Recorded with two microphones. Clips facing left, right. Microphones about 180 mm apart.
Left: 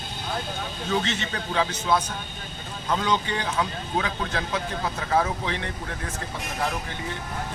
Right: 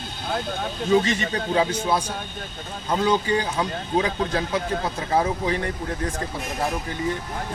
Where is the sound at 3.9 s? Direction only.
35° right (ahead or behind).